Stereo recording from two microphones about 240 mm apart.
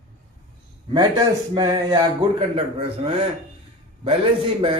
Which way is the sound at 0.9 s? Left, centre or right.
Centre.